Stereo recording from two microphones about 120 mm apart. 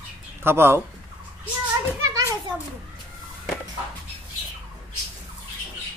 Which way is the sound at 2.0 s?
30° right (ahead or behind).